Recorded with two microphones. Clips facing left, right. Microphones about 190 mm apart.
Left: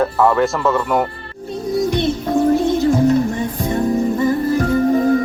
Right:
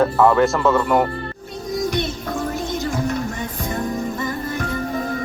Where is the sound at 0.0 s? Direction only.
Centre (ahead or behind).